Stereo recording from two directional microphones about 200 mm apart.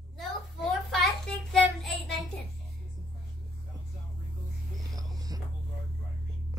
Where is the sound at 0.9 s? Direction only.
Centre (ahead or behind).